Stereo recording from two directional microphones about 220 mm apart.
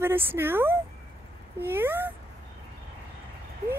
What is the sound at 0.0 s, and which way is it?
Speech, 10° right (ahead or behind).